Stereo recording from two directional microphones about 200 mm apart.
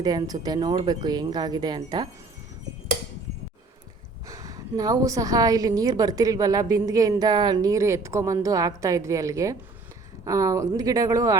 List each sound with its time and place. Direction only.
0.0 s speech: 20° right (ahead or behind)
4.3 s a woman's voice: 15° right (ahead or behind)